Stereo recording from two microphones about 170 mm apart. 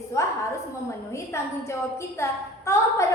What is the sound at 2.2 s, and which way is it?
Speech, 15° left (ahead or behind).